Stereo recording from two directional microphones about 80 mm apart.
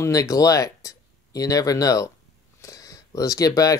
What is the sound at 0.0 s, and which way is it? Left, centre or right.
Speech, left.